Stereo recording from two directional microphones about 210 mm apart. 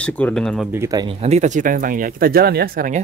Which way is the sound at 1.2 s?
35° right (ahead or behind).